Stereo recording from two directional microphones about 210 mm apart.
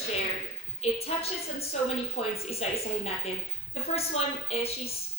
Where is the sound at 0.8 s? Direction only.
30° left (ahead or behind).